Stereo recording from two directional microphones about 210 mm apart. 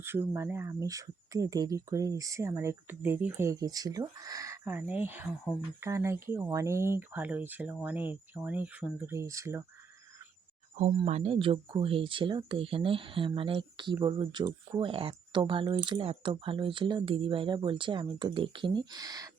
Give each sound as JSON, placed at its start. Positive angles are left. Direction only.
{"t": 0.0, "sound": "speech", "side_deg": -10}
{"t": 10.8, "sound": "speech", "side_deg": -30}